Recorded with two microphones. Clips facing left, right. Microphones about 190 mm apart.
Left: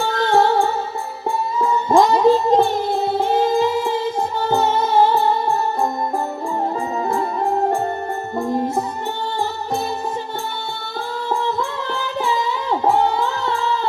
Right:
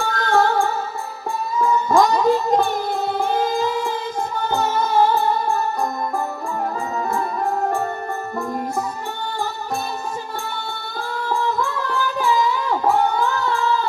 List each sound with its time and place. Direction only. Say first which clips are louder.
0.0 s music: left 2 dB; 25° left (ahead or behind)
7.1 s music: left 3 dB; 30° left (ahead or behind)
11.3 s music: even; 25° left (ahead or behind)